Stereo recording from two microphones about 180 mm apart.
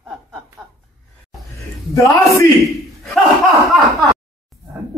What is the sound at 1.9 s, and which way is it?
Speech, 15° left (ahead or behind).